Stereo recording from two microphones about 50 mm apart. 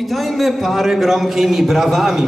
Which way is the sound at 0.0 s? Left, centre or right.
Centre.